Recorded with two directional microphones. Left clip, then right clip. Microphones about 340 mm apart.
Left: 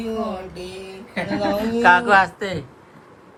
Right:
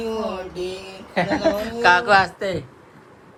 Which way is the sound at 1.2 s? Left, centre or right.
Centre.